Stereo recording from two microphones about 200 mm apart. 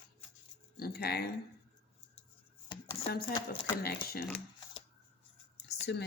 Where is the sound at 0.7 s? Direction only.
50° left (ahead or behind).